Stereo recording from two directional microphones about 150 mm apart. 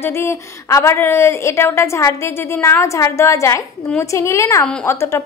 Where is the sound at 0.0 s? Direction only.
15° left (ahead or behind).